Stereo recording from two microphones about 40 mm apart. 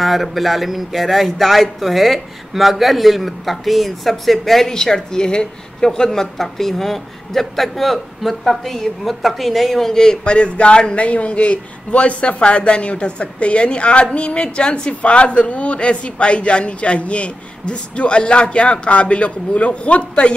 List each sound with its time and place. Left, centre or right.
0.0 s speech: centre
4.6 s a woman's voice: centre; by 20.3 s left